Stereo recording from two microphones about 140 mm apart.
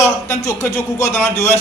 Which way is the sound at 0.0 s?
20° left (ahead or behind).